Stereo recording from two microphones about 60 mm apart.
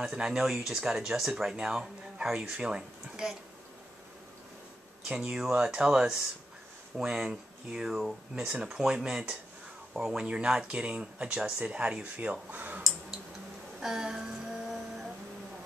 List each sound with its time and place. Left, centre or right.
0.1 s speech: centre
5.0 s speech: centre
13.7 s a sound: centre